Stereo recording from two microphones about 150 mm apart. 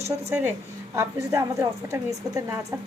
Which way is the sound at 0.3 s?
15° right (ahead or behind).